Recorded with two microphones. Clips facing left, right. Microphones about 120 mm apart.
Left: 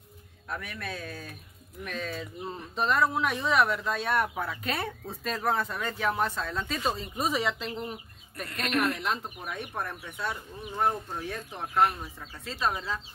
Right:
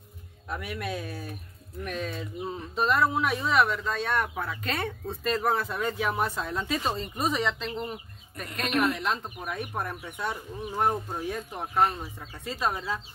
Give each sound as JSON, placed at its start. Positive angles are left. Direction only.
{"t": 0.5, "sound": "speech", "side_deg": -15}
{"t": 1.9, "sound": "speech", "side_deg": -5}
{"t": 8.6, "sound": "speech", "side_deg": -10}
{"t": 9.0, "sound": "speech", "side_deg": 0}